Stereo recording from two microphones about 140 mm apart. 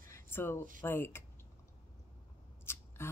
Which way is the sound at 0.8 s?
15° left (ahead or behind).